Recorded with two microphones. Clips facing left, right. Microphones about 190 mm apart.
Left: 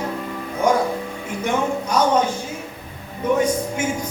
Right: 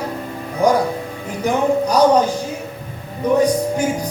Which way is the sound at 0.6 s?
35° right (ahead or behind).